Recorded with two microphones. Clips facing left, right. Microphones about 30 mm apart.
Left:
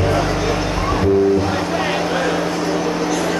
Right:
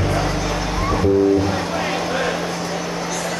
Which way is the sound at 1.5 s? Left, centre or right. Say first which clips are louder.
Left 3 dB; centre.